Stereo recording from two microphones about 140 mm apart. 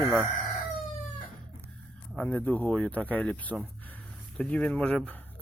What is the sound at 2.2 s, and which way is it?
Speech, 10° left (ahead or behind).